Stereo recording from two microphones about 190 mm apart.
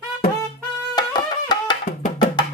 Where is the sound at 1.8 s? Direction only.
45° left (ahead or behind).